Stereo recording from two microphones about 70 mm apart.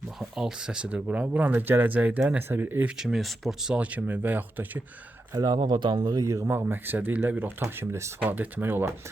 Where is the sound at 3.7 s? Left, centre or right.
Centre.